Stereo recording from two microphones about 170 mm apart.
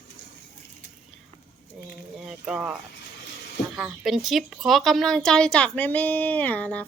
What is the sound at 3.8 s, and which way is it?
A woman's voice, 5° right (ahead or behind).